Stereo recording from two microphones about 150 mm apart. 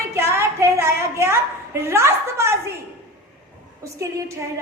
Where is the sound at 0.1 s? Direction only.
20° right (ahead or behind).